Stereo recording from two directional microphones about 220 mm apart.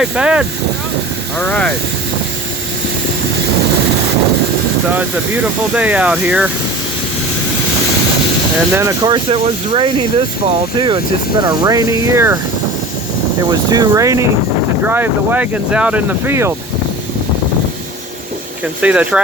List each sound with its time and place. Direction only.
0.0 s speech: 5° right (ahead or behind)
4.9 s speech: 10° right (ahead or behind)
8.7 s speech: 15° right (ahead or behind)
13.5 s speech: 20° right (ahead or behind)
18.8 s speech: 5° right (ahead or behind)